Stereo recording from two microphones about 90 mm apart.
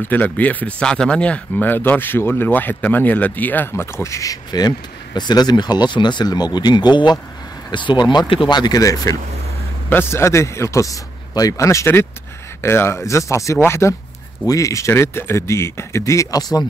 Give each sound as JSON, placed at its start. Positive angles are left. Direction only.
{"t": 0.1, "sound": "speech", "side_deg": 20}
{"t": 8.3, "sound": "speech", "side_deg": 80}
{"t": 8.5, "sound": "a man's voice", "side_deg": 45}
{"t": 9.8, "sound": "a man's voice", "side_deg": 25}